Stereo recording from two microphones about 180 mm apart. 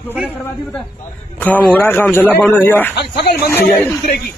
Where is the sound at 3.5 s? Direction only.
10° left (ahead or behind).